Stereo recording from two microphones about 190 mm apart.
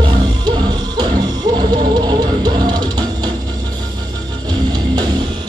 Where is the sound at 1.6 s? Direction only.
20° right (ahead or behind).